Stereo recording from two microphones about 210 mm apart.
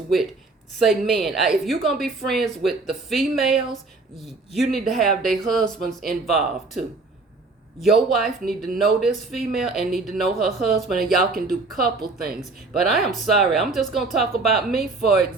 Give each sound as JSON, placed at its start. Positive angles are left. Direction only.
{"t": 0.8, "sound": "speech", "side_deg": 0}